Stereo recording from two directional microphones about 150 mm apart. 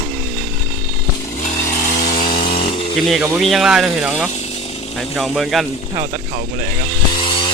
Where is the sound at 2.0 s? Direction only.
70° left (ahead or behind).